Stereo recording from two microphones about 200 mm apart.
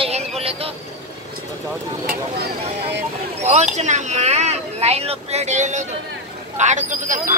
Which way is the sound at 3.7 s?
35° right (ahead or behind).